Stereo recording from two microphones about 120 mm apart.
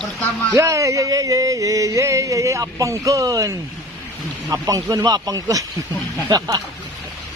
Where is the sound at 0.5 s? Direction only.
25° right (ahead or behind).